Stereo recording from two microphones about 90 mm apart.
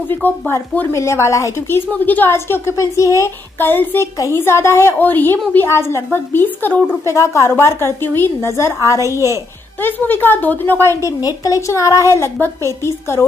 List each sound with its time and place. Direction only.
0.1 s a woman's voice: 20° left (ahead or behind)
0.9 s a woman's voice: 30° left (ahead or behind)
2.0 s a woman's voice: 20° left (ahead or behind); by 3.3 s 35° left (ahead or behind)
3.5 s a woman's voice: 25° left (ahead or behind)
7.1 s a woman's voice: 35° left (ahead or behind)
9.8 s a woman's voice: 20° left (ahead or behind)
11.1 s a woman's voice: 40° left (ahead or behind)